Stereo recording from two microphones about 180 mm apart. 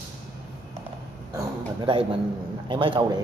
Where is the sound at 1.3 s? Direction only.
25° right (ahead or behind).